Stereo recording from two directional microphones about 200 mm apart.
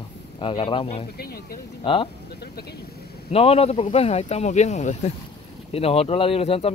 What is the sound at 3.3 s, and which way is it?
Speech, 30° left (ahead or behind).